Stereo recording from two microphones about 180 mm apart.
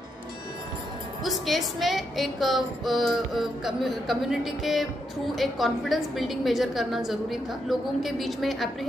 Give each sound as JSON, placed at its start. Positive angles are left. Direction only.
{"t": 1.2, "sound": "a woman's voice", "side_deg": 0}